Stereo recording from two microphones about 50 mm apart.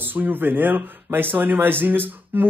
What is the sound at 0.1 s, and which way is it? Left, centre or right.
Speech, right.